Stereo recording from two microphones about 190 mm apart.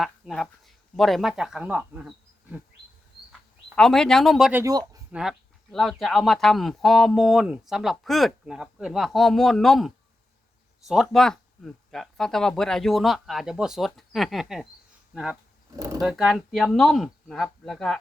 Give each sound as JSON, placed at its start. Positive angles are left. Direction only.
{"t": 0.0, "sound": "speech", "side_deg": 0}
{"t": 3.8, "sound": "speech", "side_deg": 5}
{"t": 4.6, "sound": "speech", "side_deg": -20}
{"t": 5.1, "sound": "speech", "side_deg": 0}
{"t": 15.7, "sound": "speech", "side_deg": -15}
{"t": 16.0, "sound": "speech", "side_deg": 0}